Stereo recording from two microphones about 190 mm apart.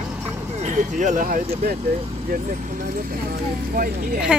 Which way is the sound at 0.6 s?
40° right (ahead or behind).